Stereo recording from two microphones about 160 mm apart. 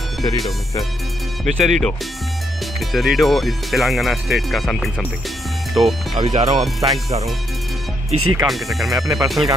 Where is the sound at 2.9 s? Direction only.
Centre (ahead or behind).